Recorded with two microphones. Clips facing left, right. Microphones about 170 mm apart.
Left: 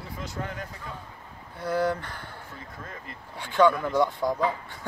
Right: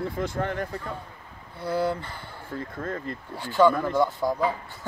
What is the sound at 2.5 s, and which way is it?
Speech, 55° right (ahead or behind).